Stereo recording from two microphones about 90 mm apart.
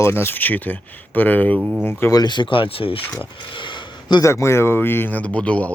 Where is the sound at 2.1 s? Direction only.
50° left (ahead or behind); by 3.0 s 75° left (ahead or behind).